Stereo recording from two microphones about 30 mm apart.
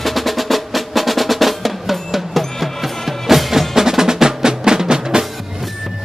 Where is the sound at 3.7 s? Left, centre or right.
Centre.